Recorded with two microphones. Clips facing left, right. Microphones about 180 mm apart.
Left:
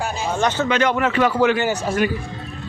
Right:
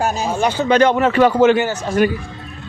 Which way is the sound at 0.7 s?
30° right (ahead or behind).